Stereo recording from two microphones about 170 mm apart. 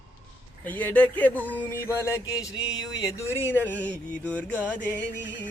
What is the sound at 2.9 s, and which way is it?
Speech, 20° left (ahead or behind).